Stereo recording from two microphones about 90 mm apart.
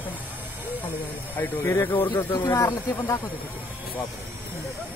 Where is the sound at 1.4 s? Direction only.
35° left (ahead or behind).